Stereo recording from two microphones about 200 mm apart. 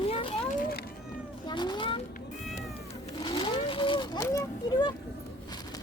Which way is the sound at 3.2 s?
25° left (ahead or behind).